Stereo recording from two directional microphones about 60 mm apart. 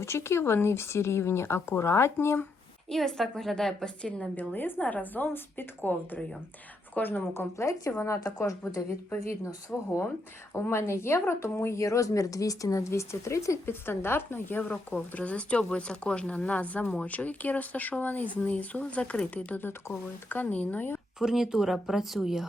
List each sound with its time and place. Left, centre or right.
0.0 s speech: left
2.9 s speech: centre
4.4 s a woman's voice: left
4.8 s a woman's voice: left
7.6 s speech: left
9.7 s speech: centre
10.7 s speech: left
11.8 s speech: left
13.7 s a woman's voice: left
15.1 s speech: left
21.2 s speech: centre